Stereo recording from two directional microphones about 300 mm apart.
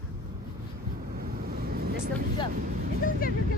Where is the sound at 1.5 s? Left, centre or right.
Right.